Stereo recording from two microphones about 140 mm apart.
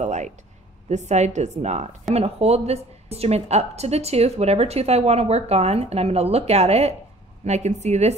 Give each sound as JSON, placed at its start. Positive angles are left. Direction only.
{"t": 0.0, "sound": "a woman's voice", "side_deg": -55}